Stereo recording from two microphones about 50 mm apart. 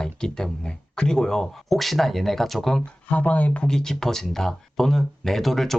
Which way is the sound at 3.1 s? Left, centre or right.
Left.